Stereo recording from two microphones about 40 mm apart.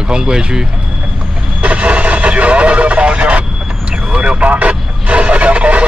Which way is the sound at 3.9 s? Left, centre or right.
Right.